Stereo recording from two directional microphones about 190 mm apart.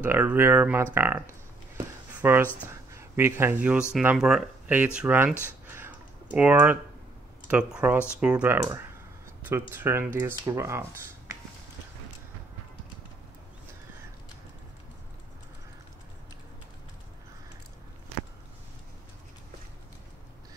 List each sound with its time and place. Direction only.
0.0 s speech: 10° right (ahead or behind)
2.2 s speech: 10° right (ahead or behind)
5.7 s a sound: 10° right (ahead or behind)
7.4 s speech: 5° right (ahead or behind)